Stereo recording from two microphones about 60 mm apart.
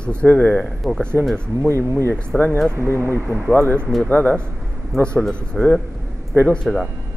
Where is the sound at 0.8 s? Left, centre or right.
Right.